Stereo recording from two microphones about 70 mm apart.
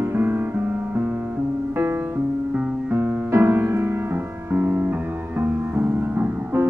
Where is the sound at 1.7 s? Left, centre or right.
Right.